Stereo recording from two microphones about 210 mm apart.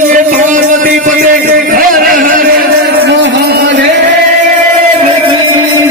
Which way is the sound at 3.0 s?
55° right (ahead or behind).